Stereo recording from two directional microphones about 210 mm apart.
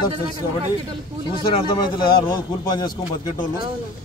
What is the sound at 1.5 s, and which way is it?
A man's voice, 20° left (ahead or behind).